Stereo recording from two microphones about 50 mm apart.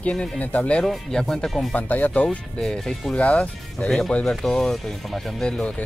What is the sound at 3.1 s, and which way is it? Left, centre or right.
Speech, left.